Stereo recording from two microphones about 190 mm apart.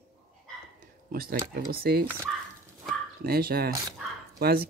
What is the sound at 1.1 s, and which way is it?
Speech, 50° right (ahead or behind).